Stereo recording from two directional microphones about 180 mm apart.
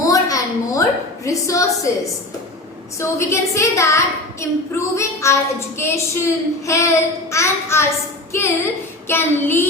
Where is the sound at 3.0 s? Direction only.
15° left (ahead or behind).